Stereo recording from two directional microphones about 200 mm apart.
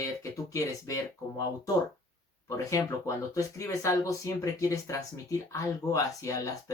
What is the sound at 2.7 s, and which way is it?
Speech, 15° left (ahead or behind).